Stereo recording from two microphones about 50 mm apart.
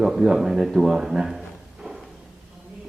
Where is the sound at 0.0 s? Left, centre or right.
Centre.